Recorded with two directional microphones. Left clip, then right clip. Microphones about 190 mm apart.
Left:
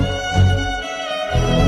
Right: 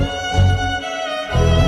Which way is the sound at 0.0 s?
Centre (ahead or behind).